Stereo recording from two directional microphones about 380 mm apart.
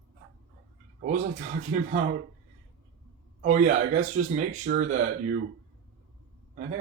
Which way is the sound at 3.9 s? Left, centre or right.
Right.